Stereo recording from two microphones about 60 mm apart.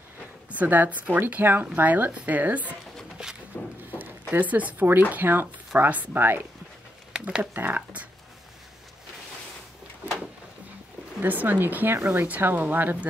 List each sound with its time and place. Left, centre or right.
0.5 s speech: right
3.2 s a sound: centre
4.3 s speech: right
5.8 s speech: right
6.1 s speech: right
7.1 s a sound: centre
7.5 s speech: right
11.1 s speech: right